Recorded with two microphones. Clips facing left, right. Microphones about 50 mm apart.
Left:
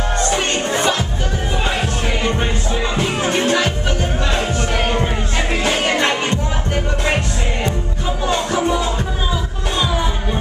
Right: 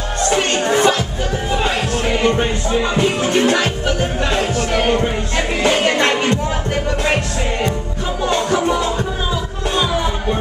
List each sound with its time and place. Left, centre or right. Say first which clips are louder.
0.7 s music: right 5 dB; right
2.4 s music: right 3 dB; centre
3.3 s music: right 2 dB; right
8.3 s music: right 1 dB; centre